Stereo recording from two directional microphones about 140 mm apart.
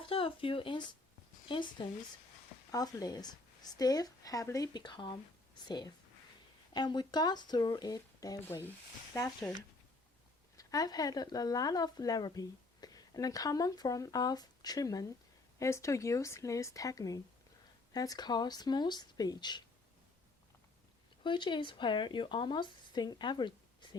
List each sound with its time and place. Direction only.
0.0 s speech: 40° left (ahead or behind); by 9.3 s 25° left (ahead or behind)
10.6 s speech: 25° left (ahead or behind)
21.2 s speech: 35° left (ahead or behind)